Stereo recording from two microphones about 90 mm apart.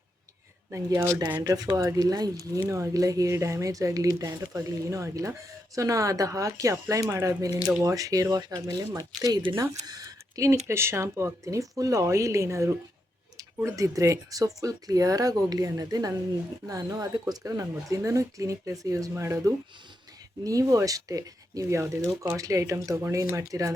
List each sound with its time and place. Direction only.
0.7 s speech: 30° right (ahead or behind)
1.4 s speech: 45° right (ahead or behind)
2.6 s speech: 35° right (ahead or behind)